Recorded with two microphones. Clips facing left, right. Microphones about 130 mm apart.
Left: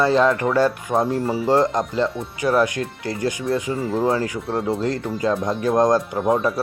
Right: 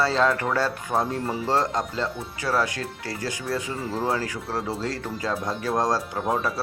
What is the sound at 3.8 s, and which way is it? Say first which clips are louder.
Speech: left 6 dB; centre (ahead or behind).